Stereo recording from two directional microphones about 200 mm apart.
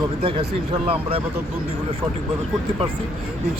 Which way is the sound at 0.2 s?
25° right (ahead or behind).